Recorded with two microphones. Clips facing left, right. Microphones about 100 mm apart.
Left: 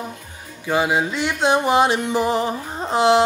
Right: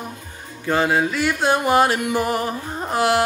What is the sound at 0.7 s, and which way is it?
Music, 15° left (ahead or behind).